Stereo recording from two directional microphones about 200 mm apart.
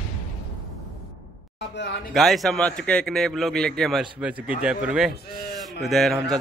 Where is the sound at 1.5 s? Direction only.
60° left (ahead or behind).